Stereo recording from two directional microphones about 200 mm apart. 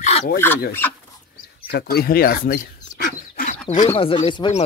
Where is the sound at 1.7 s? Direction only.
50° left (ahead or behind).